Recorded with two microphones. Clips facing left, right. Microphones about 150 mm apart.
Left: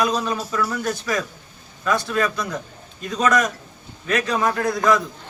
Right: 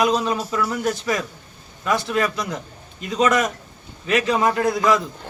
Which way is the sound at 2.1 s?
20° right (ahead or behind).